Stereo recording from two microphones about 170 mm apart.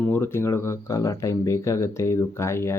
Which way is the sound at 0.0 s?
10° left (ahead or behind).